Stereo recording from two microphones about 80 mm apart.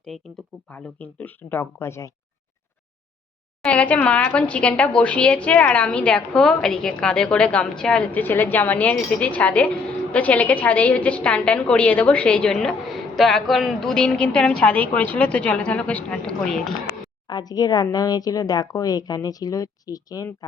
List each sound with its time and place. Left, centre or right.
0.1 s speech: centre
0.7 s speech: centre; by 2.1 s left
3.7 s a woman's voice: centre
17.2 s a woman's voice: left